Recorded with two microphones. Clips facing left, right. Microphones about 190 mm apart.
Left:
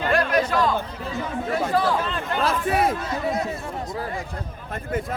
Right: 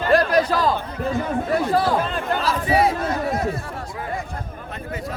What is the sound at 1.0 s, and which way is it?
Speech, 50° right (ahead or behind).